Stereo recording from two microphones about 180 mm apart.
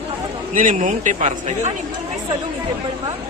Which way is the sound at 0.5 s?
45° right (ahead or behind).